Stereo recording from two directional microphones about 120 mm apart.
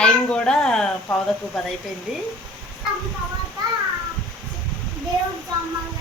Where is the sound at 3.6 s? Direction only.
35° right (ahead or behind).